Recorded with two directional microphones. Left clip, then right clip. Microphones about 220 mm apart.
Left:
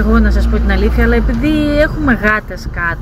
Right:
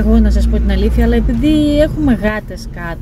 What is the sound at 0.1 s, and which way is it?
Speech, 15° right (ahead or behind).